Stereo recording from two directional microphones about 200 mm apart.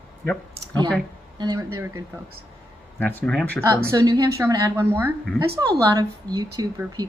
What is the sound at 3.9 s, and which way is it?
A woman's voice, 15° right (ahead or behind).